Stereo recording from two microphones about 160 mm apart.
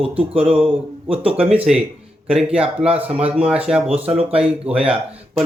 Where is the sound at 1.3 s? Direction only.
10° right (ahead or behind).